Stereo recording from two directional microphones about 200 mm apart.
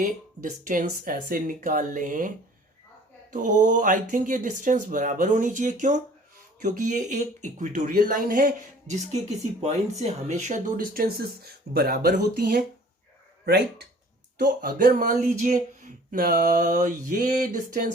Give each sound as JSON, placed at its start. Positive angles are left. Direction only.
{"t": 0.0, "sound": "speech", "side_deg": -40}
{"t": 3.3, "sound": "speech", "side_deg": -40}